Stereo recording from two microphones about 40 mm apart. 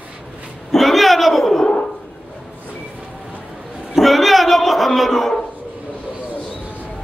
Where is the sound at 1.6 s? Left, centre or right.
Centre.